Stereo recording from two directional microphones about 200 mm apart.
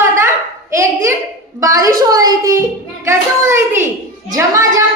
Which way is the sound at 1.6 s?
15° right (ahead or behind).